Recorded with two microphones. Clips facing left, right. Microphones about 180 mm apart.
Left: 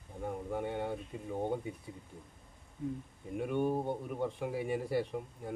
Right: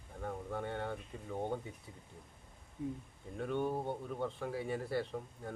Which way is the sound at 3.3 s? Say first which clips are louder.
Left 4 dB; 15° left (ahead or behind).